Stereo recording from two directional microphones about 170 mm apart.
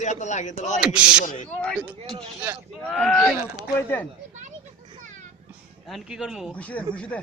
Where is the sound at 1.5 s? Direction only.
5° left (ahead or behind).